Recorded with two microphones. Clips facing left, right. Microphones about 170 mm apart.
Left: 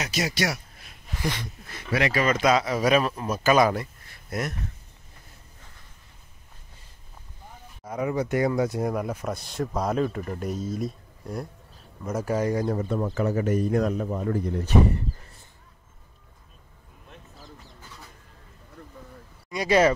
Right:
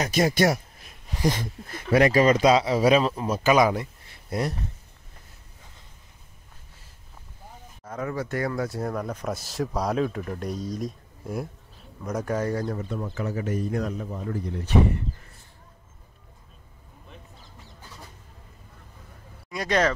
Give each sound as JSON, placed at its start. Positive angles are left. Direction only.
{"t": 0.0, "sound": "speech", "side_deg": -50}
{"t": 2.4, "sound": "speech", "side_deg": -25}
{"t": 4.3, "sound": "speech", "side_deg": -30}
{"t": 7.8, "sound": "speech", "side_deg": 15}
{"t": 13.0, "sound": "a man's voice", "side_deg": 60}
{"t": 19.5, "sound": "speech", "side_deg": 5}